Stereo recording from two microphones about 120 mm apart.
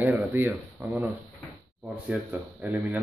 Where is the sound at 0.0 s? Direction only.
20° right (ahead or behind).